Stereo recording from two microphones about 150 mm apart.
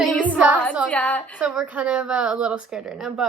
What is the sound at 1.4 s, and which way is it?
Speech, 10° right (ahead or behind).